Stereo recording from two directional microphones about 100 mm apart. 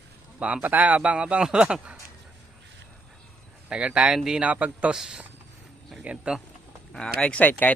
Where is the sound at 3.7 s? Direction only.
10° right (ahead or behind).